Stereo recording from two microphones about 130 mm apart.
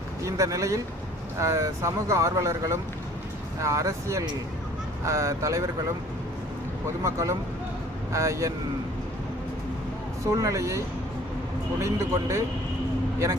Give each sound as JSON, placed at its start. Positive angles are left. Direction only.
{"t": 0.3, "sound": "speech", "side_deg": -25}
{"t": 7.0, "sound": "speech", "side_deg": -25}
{"t": 10.2, "sound": "speech", "side_deg": -25}